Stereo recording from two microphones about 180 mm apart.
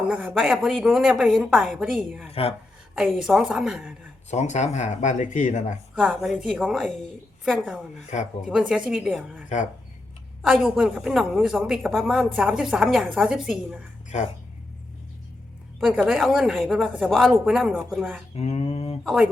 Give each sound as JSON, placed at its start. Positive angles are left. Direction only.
{"t": 0.1, "sound": "a woman's voice", "side_deg": -5}
{"t": 2.3, "sound": "speech", "side_deg": 35}
{"t": 2.9, "sound": "a woman's voice", "side_deg": -5}
{"t": 4.3, "sound": "speech", "side_deg": 40}
{"t": 5.9, "sound": "a woman's voice", "side_deg": -5}
{"t": 10.4, "sound": "a woman's voice", "side_deg": -5}
{"t": 15.8, "sound": "a woman's voice", "side_deg": -5}
{"t": 18.3, "sound": "speech", "side_deg": 35}
{"t": 19.0, "sound": "a woman's voice", "side_deg": -5}